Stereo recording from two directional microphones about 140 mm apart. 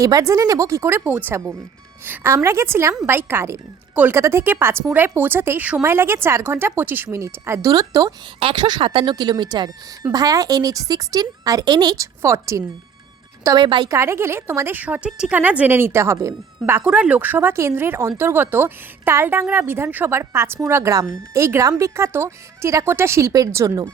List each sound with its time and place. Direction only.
0.0 s a woman's voice: 25° right (ahead or behind)
13.6 s a woman's voice: 35° right (ahead or behind)
13.9 s a woman's voice: 20° right (ahead or behind)